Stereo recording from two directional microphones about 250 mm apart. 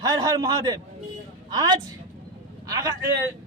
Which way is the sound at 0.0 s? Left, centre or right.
Centre.